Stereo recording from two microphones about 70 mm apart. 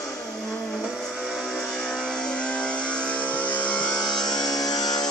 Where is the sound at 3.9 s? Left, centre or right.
Left.